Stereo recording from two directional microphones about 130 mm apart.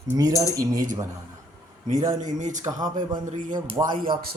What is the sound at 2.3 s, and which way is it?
Speech, 70° right (ahead or behind).